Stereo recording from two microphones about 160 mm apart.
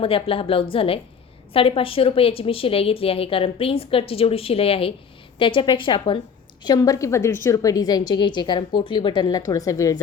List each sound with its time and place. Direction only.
0.0 s a woman's voice: 35° left (ahead or behind); by 10.0 s 20° left (ahead or behind)